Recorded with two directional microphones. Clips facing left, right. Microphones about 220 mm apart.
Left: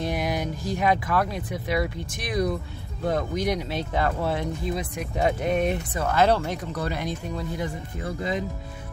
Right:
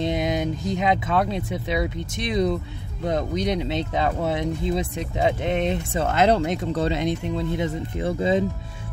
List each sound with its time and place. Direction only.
0.0 s speech: 20° right (ahead or behind)